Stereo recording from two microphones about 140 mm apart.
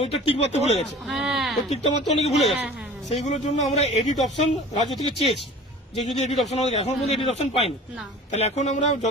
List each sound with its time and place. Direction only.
0.0 s speech: 45° left (ahead or behind)
0.8 s speech: centre (ahead or behind)
1.7 s speech: 50° left (ahead or behind)
6.0 s speech: 55° left (ahead or behind)